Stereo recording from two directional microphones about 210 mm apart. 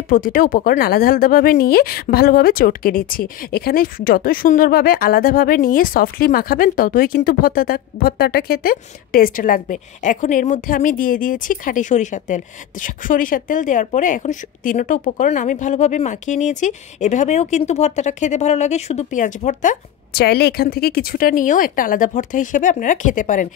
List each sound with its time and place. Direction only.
0.1 s speech: 40° left (ahead or behind)
20.1 s speech: 50° left (ahead or behind)